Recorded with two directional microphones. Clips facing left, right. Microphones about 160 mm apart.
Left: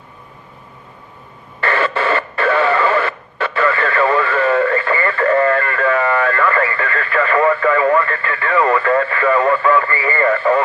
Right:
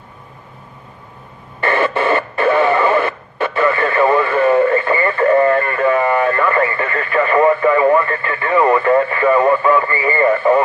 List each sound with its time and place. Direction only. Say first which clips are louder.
1.6 s radio: right 2 dB; 15° right (ahead or behind)